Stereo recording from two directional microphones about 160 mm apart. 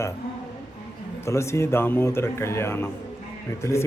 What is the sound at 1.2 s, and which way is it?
Speech, 15° left (ahead or behind).